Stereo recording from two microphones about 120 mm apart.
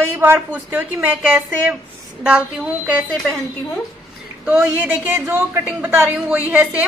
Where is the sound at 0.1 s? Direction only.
20° right (ahead or behind).